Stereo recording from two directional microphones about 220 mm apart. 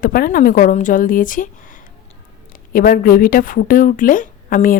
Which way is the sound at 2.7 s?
40° left (ahead or behind).